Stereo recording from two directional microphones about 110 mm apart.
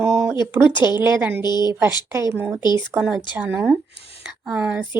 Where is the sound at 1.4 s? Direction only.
40° left (ahead or behind).